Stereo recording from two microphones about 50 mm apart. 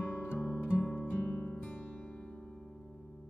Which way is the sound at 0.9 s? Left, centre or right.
Left.